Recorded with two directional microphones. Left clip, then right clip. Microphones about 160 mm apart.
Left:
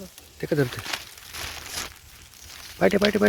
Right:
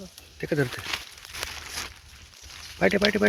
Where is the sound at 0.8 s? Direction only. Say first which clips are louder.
Even; 90° left.